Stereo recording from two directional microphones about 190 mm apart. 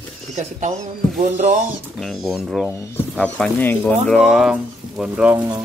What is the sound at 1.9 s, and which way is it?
Speech, centre (ahead or behind).